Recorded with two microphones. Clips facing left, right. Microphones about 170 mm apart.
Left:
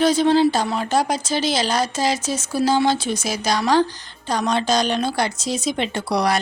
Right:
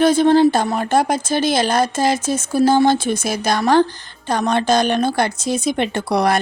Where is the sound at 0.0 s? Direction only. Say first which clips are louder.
Right 3 dB; 55° right (ahead or behind).